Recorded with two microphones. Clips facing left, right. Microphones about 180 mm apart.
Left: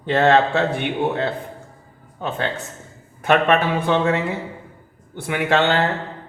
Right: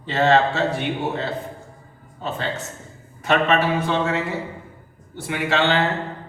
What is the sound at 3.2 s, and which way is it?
A man's voice, 55° left (ahead or behind).